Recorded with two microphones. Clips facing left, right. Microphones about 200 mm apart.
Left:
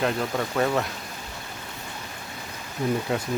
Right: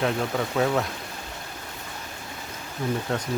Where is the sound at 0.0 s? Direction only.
Centre (ahead or behind).